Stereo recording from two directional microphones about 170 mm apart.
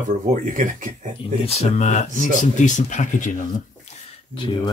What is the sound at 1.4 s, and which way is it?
Speech, 40° left (ahead or behind).